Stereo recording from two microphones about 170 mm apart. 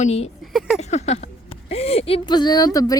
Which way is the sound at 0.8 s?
40° left (ahead or behind).